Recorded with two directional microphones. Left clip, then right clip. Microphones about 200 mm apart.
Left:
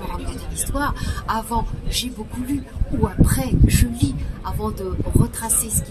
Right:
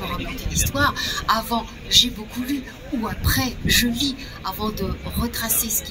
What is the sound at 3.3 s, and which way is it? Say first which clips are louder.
Speech: right 3 dB; 35° left (ahead or behind).